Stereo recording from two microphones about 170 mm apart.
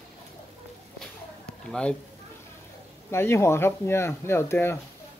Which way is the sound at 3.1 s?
15° left (ahead or behind).